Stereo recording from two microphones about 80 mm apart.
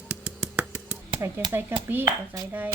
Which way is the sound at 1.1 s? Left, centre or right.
Right.